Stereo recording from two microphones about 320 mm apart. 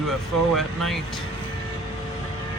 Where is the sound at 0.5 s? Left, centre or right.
Centre.